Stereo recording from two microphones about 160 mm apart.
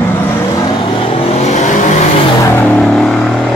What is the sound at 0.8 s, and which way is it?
Vehicle, 35° left (ahead or behind).